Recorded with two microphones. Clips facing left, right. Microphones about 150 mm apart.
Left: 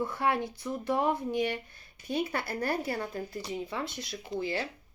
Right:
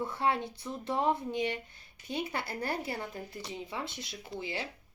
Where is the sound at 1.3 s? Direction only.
20° right (ahead or behind).